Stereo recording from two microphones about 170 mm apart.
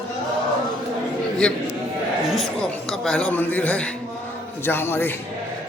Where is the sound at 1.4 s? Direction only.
5° left (ahead or behind).